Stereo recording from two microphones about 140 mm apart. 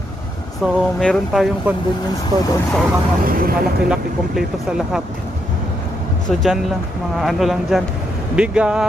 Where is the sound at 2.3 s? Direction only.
25° right (ahead or behind).